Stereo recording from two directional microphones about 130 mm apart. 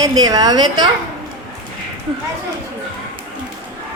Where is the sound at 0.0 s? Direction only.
30° right (ahead or behind).